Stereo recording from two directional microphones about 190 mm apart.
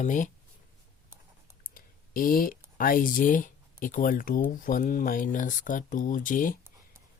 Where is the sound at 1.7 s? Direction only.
50° left (ahead or behind).